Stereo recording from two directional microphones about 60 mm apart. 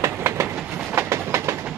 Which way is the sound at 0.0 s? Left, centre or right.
Right.